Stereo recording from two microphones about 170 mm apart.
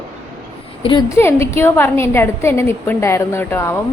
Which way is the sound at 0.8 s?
30° left (ahead or behind).